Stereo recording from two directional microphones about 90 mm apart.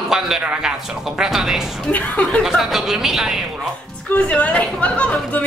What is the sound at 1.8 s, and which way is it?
Speech, 15° left (ahead or behind).